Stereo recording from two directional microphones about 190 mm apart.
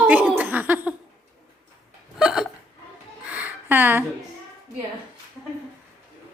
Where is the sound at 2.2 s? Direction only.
5° right (ahead or behind).